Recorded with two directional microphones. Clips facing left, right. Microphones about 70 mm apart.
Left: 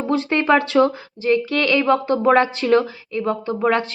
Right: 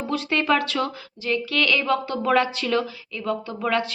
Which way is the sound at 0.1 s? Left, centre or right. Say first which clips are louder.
Left 5 dB; left.